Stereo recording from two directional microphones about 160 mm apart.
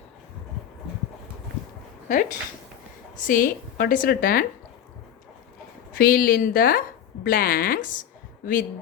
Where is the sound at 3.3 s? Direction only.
60° left (ahead or behind).